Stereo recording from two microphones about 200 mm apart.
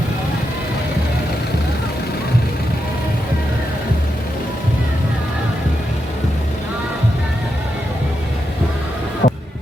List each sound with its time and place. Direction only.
9.2 s music: 45° left (ahead or behind)